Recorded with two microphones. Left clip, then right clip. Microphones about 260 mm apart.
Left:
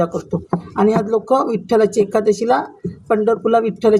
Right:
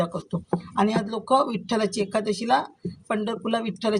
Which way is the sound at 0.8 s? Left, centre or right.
Right.